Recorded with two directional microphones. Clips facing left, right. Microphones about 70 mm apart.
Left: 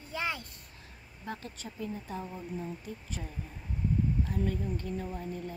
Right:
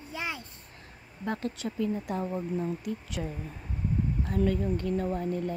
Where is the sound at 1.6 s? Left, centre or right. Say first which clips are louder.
Right 8 dB; right.